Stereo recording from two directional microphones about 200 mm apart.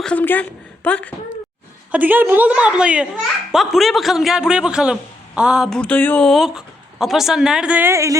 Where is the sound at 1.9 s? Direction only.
10° right (ahead or behind).